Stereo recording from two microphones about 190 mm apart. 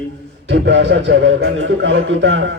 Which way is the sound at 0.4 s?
75° right (ahead or behind).